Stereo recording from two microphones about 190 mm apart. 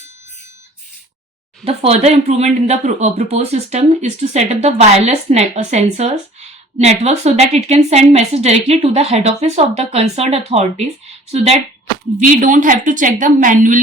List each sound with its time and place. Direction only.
1.6 s a woman's voice: 30° right (ahead or behind)